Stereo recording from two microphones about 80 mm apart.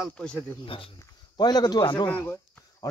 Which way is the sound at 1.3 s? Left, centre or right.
Left.